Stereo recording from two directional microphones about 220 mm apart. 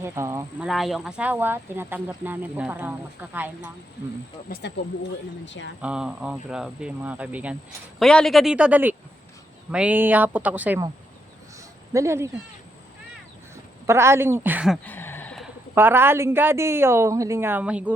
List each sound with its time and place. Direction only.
0.0 s speech: 10° right (ahead or behind)
0.7 s speech: centre (ahead or behind)
4.4 s speech: 45° left (ahead or behind)
5.5 s speech: 55° left (ahead or behind)
5.8 s speech: 5° right (ahead or behind)
11.9 s speech: 10° right (ahead or behind)
13.8 s speech: 10° right (ahead or behind)
14.8 s a sound: 10° left (ahead or behind)
15.7 s speech: 10° right (ahead or behind)